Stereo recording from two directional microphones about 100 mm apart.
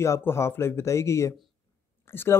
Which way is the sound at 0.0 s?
25° left (ahead or behind).